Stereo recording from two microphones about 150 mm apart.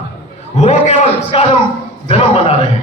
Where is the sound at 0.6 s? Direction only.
45° left (ahead or behind).